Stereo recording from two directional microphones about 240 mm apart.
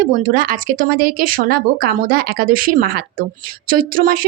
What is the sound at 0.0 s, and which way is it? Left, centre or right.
Speech, right.